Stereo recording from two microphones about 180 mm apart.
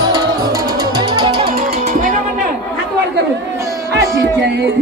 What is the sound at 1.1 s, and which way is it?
Music, 25° right (ahead or behind).